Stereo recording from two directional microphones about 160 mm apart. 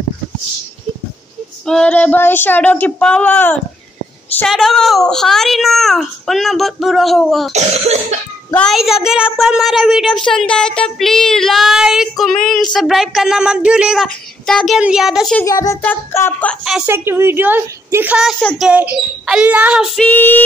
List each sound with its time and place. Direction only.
1.7 s speech: 5° left (ahead or behind)
4.5 s a woman's voice: centre (ahead or behind)
7.5 s cough: 45° right (ahead or behind)
8.5 s a woman's voice: centre (ahead or behind)
15.4 s a child's voice: 20° left (ahead or behind)
16.8 s a woman's voice: 15° right (ahead or behind)
18.4 s speech: 10° left (ahead or behind)
18.7 s a woman's voice: 5° right (ahead or behind)
20.0 s speech: 10° left (ahead or behind)